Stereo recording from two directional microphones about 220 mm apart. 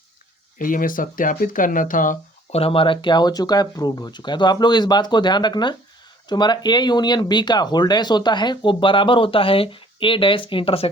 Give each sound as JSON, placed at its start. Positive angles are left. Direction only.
{"t": 0.6, "sound": "speech", "side_deg": 40}